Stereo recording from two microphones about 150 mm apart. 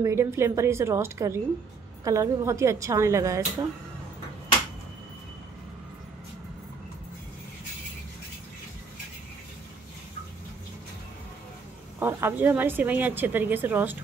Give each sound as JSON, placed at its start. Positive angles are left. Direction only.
{"t": 0.0, "sound": "a woman's voice", "side_deg": -15}
{"t": 12.0, "sound": "a woman's voice", "side_deg": -15}